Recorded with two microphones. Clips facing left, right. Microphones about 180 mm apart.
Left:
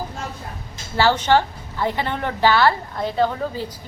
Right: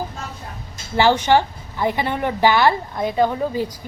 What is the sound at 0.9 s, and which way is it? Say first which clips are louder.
A woman's voice: right 2 dB; 15° right (ahead or behind).